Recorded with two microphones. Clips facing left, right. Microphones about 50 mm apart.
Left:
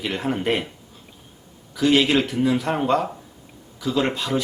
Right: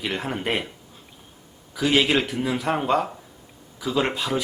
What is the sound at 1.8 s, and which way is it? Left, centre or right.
Speech, centre.